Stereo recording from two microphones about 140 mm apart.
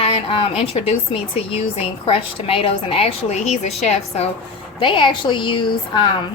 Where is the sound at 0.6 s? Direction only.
45° left (ahead or behind).